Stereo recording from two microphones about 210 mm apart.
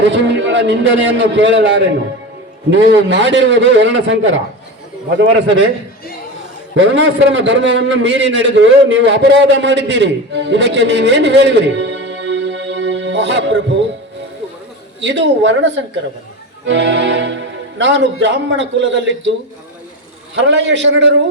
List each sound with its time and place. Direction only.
0.0 s speech: 60° right (ahead or behind)
6.7 s a man's voice: 60° right (ahead or behind)
15.0 s speech: 60° right (ahead or behind)
20.3 s speech: 60° right (ahead or behind)